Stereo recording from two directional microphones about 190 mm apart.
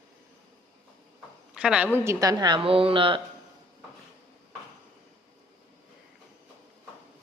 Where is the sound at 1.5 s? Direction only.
5° right (ahead or behind).